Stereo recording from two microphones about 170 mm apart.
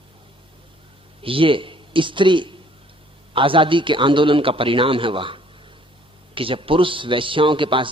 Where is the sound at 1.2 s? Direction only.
30° right (ahead or behind).